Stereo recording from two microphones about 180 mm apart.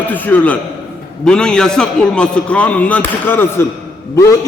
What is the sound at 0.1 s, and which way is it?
A man's voice, 10° left (ahead or behind).